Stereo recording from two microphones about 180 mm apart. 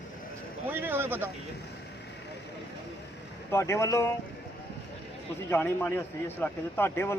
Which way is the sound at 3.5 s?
15° left (ahead or behind).